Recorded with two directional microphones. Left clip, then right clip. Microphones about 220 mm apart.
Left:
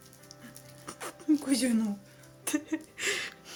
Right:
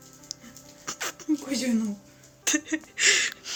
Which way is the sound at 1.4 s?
50° left (ahead or behind).